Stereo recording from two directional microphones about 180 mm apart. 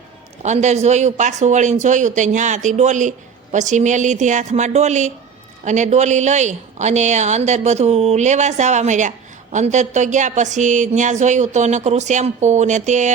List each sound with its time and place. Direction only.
0.4 s speech: 40° right (ahead or behind)